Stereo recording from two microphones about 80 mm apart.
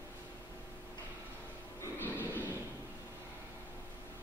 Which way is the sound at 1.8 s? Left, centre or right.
Left.